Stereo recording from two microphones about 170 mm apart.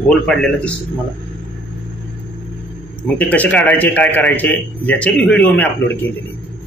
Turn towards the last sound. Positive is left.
turn(degrees=10)  # may be behind; listen again after turning